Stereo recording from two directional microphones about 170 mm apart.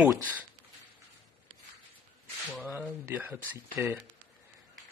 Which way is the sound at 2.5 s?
10° right (ahead or behind).